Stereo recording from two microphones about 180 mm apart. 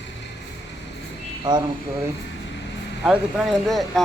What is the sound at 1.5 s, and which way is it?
Speech, 25° right (ahead or behind).